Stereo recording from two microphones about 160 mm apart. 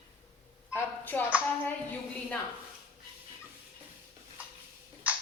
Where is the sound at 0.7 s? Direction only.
10° left (ahead or behind).